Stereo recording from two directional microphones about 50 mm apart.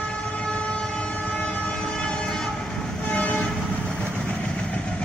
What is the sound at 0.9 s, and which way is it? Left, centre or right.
Train, left.